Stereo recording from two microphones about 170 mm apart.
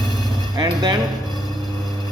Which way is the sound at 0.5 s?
25° right (ahead or behind).